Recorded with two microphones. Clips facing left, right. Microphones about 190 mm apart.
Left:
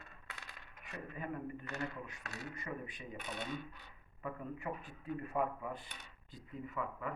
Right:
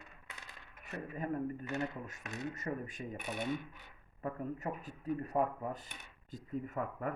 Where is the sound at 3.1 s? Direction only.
15° right (ahead or behind).